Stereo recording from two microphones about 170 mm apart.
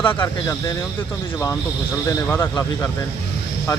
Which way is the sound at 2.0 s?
15° left (ahead or behind).